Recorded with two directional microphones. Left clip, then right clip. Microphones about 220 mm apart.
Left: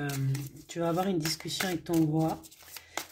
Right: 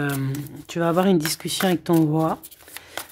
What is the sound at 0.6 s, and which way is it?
Speech, 35° right (ahead or behind).